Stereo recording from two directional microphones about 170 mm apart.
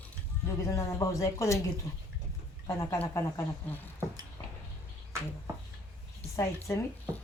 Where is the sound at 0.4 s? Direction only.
20° left (ahead or behind).